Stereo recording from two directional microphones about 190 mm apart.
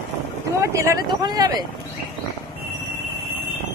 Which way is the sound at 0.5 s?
15° right (ahead or behind).